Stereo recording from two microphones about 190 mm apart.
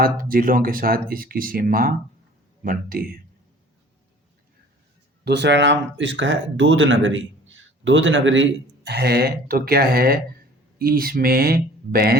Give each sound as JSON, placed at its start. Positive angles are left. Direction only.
{"t": 0.0, "sound": "speech", "side_deg": -50}
{"t": 5.2, "sound": "speech", "side_deg": -65}